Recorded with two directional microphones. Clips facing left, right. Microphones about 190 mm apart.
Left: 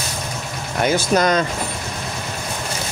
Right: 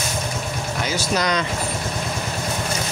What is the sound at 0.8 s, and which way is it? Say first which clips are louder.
Speech: left 6 dB; 50° left (ahead or behind).